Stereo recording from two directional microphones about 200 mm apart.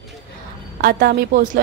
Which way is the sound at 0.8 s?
50° right (ahead or behind).